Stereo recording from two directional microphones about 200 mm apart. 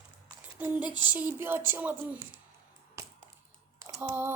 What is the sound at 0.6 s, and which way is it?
Speech, 5° right (ahead or behind).